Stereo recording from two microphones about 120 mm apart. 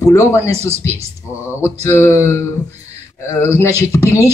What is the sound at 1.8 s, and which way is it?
Speech, 25° left (ahead or behind).